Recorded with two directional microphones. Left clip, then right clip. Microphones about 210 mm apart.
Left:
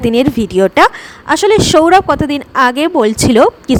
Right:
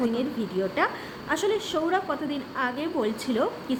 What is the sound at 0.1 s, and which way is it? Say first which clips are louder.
A woman's voice: left 17 dB; 50° left (ahead or behind).